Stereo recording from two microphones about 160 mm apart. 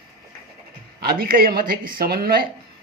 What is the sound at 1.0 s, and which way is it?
Speech, 70° right (ahead or behind).